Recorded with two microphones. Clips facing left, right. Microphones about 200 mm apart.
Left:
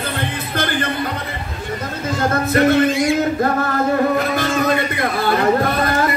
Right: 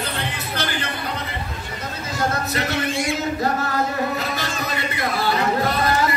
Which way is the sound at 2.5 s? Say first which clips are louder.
Left 11 dB; 50° left (ahead or behind).